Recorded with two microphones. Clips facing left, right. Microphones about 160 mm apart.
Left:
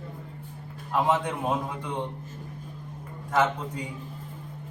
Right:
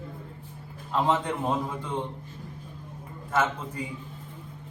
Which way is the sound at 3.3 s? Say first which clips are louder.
Left 2 dB; 15° left (ahead or behind).